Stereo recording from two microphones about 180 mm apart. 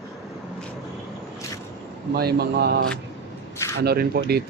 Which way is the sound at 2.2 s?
60° right (ahead or behind).